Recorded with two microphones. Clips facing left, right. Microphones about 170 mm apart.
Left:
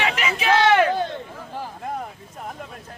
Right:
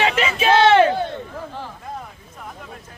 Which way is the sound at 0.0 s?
30° right (ahead or behind).